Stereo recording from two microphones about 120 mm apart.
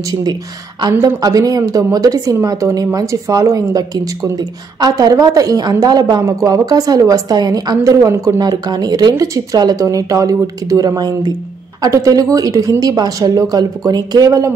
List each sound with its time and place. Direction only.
0.1 s a woman's voice: 35° right (ahead or behind)